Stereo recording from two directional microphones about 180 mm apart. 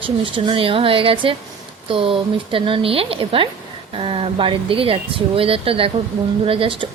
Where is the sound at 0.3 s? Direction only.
30° right (ahead or behind).